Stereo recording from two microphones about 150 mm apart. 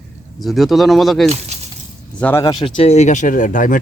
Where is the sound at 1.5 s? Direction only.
45° right (ahead or behind).